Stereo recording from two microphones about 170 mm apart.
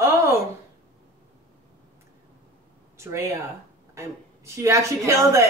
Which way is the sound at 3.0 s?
15° right (ahead or behind).